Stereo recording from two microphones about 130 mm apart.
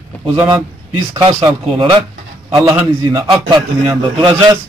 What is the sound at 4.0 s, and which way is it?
Speech, 40° right (ahead or behind).